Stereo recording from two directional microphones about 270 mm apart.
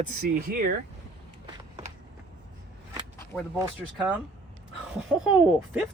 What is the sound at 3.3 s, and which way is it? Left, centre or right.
Speech, centre.